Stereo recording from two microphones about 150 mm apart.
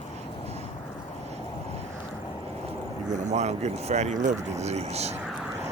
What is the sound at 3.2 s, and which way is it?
Speech, 50° right (ahead or behind).